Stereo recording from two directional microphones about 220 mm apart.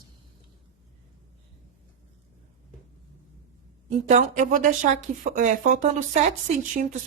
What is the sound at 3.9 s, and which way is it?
Speech, 30° right (ahead or behind).